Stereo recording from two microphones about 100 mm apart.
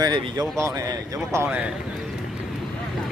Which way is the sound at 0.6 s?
30° right (ahead or behind).